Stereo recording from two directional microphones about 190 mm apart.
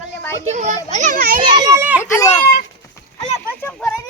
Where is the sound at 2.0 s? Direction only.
15° left (ahead or behind).